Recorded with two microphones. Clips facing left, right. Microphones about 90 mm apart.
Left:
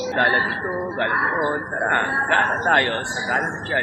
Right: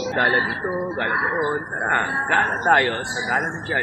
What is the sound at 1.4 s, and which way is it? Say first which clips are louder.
Speech: left 1 dB; 5° right (ahead or behind).